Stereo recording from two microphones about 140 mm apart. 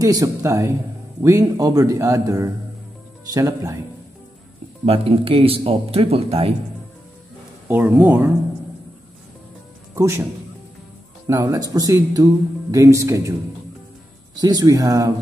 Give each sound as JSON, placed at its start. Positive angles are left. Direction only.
{"t": 0.0, "sound": "a man's voice", "side_deg": -25}
{"t": 4.8, "sound": "speech", "side_deg": -45}
{"t": 7.6, "sound": "speech", "side_deg": -15}
{"t": 9.9, "sound": "a man's voice", "side_deg": -20}
{"t": 11.2, "sound": "a man's voice", "side_deg": -25}
{"t": 14.4, "sound": "a man's voice", "side_deg": -25}